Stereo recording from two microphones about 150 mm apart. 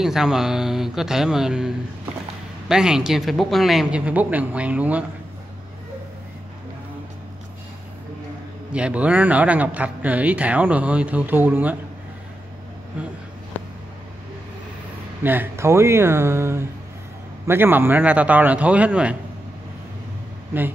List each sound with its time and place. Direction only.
0.0 s speech: 5° right (ahead or behind)
2.7 s speech: 5° right (ahead or behind)
8.7 s speech: 10° right (ahead or behind)
15.2 s speech: 15° right (ahead or behind)